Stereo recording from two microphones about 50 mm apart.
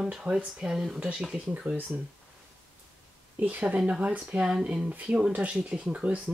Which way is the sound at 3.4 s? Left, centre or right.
Right.